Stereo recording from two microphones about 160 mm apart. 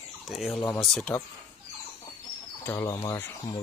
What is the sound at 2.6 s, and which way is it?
Speech, 15° left (ahead or behind).